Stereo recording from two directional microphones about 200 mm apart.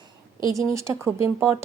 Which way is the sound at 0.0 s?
20° right (ahead or behind).